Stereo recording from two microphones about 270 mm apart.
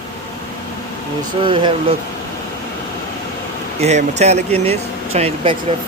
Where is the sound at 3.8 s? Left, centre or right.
Right.